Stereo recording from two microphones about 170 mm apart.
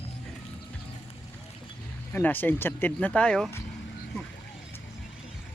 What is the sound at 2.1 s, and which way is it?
Speech, 10° left (ahead or behind).